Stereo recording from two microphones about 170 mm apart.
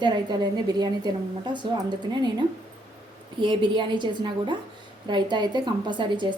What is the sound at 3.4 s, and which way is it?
A woman's voice, 30° right (ahead or behind).